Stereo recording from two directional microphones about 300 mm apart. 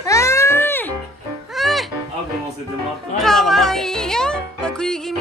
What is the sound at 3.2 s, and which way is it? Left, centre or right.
Music, centre.